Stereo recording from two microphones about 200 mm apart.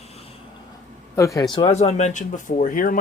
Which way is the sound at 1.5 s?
30° left (ahead or behind).